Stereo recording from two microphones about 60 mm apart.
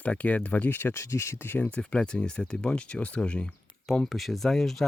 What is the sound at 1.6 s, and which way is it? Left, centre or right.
Speech, left.